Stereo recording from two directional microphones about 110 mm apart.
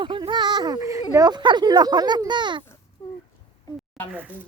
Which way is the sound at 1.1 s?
35° right (ahead or behind).